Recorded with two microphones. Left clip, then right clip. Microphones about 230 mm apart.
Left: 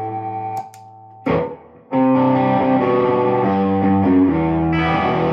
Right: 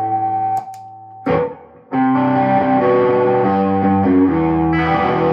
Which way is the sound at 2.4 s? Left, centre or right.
Left.